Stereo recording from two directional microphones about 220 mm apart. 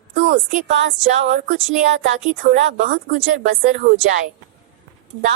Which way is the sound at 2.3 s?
35° right (ahead or behind).